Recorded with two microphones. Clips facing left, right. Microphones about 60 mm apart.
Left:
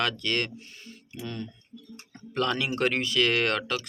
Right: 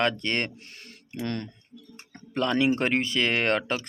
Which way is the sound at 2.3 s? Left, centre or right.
Right.